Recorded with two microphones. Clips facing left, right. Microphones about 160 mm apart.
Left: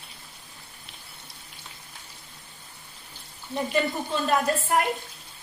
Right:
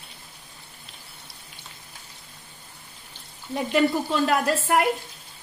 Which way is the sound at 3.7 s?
80° right.